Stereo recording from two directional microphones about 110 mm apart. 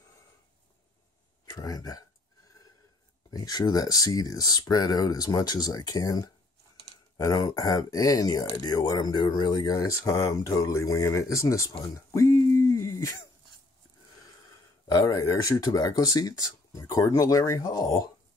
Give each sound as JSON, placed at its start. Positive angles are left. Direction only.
{"t": 1.4, "sound": "speech", "side_deg": 35}
{"t": 3.3, "sound": "speech", "side_deg": 35}
{"t": 12.1, "sound": "a sound", "side_deg": 25}
{"t": 15.0, "sound": "speech", "side_deg": 35}